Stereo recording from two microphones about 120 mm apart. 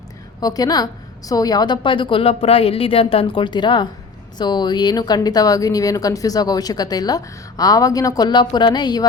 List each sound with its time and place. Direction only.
0.3 s a woman's voice: 30° left (ahead or behind)